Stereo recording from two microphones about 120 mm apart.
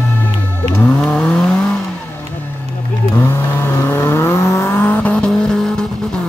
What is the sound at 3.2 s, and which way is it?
Vehicle, 20° left (ahead or behind).